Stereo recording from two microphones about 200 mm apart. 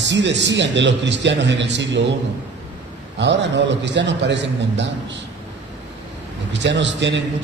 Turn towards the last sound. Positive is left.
turn(degrees=-60)  # may be behind; listen again after turning